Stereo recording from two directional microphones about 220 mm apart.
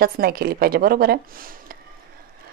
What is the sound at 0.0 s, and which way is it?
A woman's voice, 45° right (ahead or behind).